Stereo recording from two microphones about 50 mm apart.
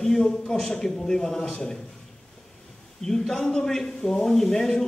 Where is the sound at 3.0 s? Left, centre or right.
Centre.